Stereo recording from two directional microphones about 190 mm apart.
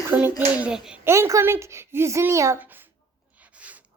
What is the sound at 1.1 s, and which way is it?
A woman's voice, 15° right (ahead or behind).